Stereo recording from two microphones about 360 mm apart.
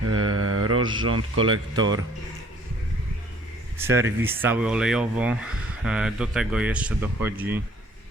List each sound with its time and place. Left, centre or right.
0.0 s mantra: right
1.0 s speech: right
1.7 s speech: centre
3.8 s speech: centre